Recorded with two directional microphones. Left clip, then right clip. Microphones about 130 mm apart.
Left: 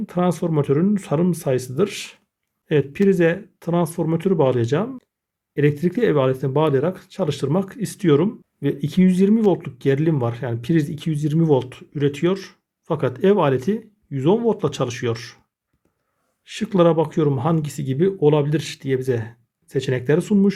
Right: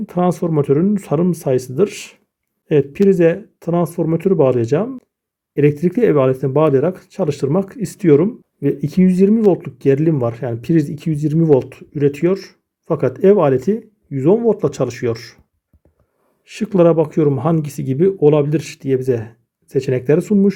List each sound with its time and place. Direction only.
0.0 s speech: 25° right (ahead or behind)
16.4 s speech: 25° right (ahead or behind)